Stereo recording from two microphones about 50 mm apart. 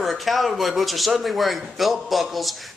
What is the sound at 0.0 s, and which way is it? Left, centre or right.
Speech, centre.